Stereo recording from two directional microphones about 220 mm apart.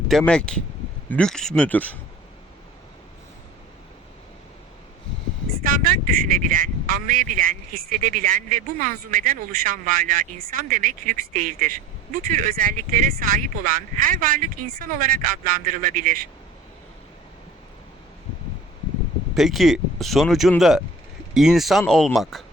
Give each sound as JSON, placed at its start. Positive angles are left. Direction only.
{"t": 0.1, "sound": "speech", "side_deg": 5}
{"t": 5.6, "sound": "speech", "side_deg": -40}
{"t": 19.3, "sound": "speech", "side_deg": 0}